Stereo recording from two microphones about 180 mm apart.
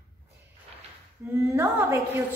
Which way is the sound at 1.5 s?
15° right (ahead or behind).